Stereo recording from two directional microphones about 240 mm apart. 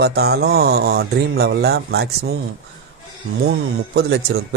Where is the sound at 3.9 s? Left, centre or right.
Right.